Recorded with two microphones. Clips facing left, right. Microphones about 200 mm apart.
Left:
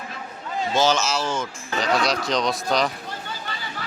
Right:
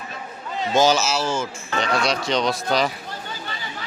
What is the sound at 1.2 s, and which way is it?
Speech, 30° right (ahead or behind).